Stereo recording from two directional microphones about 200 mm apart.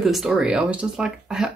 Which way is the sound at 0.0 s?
Centre (ahead or behind).